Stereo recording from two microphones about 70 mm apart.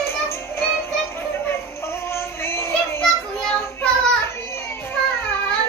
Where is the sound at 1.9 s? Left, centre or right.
Left.